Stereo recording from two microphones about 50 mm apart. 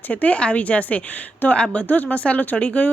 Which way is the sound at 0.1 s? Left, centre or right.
Left.